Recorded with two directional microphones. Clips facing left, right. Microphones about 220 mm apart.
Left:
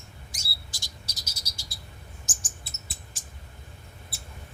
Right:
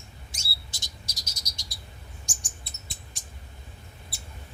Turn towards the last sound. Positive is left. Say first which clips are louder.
# even
turn(degrees=0)  # may be behind; listen again after turning